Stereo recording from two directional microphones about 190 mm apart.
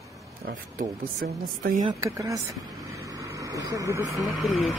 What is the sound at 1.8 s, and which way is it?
Speech, 20° right (ahead or behind).